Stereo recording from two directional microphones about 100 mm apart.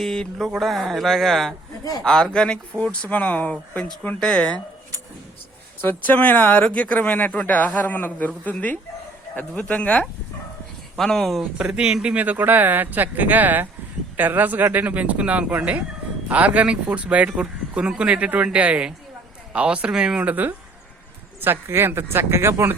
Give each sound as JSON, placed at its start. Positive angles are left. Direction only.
{"t": 0.0, "sound": "a man's voice", "side_deg": 5}
{"t": 5.8, "sound": "speech", "side_deg": 20}